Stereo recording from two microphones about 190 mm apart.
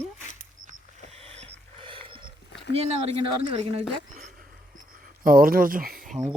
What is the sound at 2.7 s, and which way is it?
Speech, 30° right (ahead or behind).